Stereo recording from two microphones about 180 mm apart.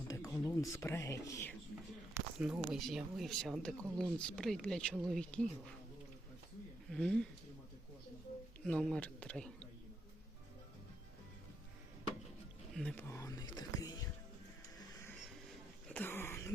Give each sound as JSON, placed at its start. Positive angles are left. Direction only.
{"t": 0.4, "sound": "speech", "side_deg": 20}
{"t": 2.1, "sound": "speech", "side_deg": -5}
{"t": 6.9, "sound": "speech", "side_deg": 5}
{"t": 8.6, "sound": "speech", "side_deg": 5}
{"t": 12.7, "sound": "whispering", "side_deg": 5}
{"t": 15.9, "sound": "throat clearing", "side_deg": 10}